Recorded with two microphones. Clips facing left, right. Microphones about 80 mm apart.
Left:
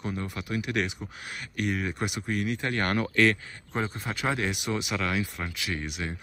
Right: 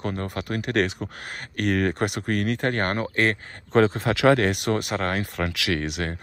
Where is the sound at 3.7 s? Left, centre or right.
Right.